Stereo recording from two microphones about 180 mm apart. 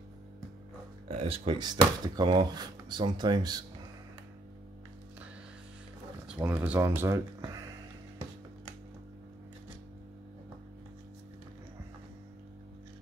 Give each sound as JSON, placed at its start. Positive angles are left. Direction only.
{"t": 1.0, "sound": "speech", "side_deg": -35}
{"t": 6.2, "sound": "speech", "side_deg": -10}